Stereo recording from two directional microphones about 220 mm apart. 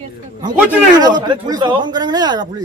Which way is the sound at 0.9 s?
20° right (ahead or behind).